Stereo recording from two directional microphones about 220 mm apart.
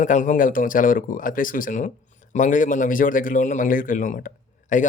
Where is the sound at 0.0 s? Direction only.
35° left (ahead or behind).